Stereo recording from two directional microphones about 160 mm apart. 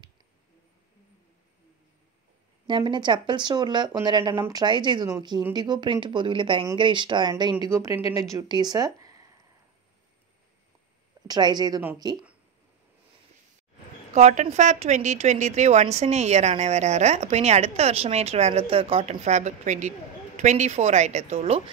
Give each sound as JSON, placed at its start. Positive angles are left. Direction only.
{"t": 2.6, "sound": "speech", "side_deg": -30}
{"t": 11.2, "sound": "speech", "side_deg": -25}
{"t": 14.1, "sound": "a woman's voice", "side_deg": -45}